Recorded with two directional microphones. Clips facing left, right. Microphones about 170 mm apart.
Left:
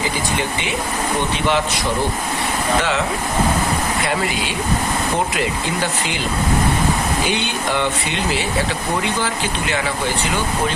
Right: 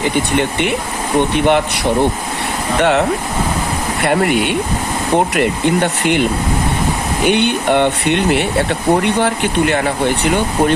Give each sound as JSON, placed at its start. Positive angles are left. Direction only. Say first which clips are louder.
{"t": 0.0, "sound": "speech", "louder": "right 6 dB", "side_deg": -60}
{"t": 4.0, "sound": "speech", "louder": "right 7 dB", "side_deg": -60}
{"t": 7.3, "sound": "speech", "louder": "right 8 dB", "side_deg": -60}